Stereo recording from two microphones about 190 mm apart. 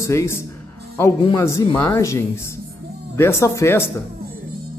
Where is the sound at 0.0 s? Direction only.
15° left (ahead or behind).